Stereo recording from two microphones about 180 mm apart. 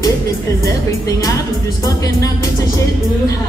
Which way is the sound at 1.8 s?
20° left (ahead or behind).